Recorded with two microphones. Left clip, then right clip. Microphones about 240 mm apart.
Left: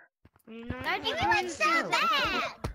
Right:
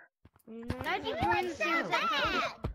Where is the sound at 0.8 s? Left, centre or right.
Centre.